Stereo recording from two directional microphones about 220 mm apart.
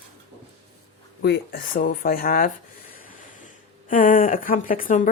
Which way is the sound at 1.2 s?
45° left (ahead or behind).